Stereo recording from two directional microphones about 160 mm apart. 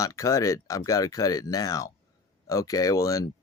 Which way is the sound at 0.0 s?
20° left (ahead or behind).